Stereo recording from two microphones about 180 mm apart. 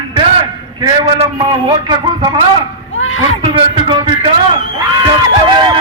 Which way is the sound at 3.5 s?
25° right (ahead or behind).